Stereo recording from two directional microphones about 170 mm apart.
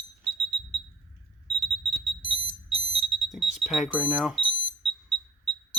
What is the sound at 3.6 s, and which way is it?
Speech, centre (ahead or behind).